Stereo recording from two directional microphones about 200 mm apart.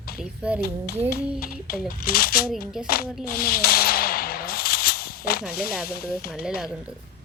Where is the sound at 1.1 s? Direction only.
50° left (ahead or behind).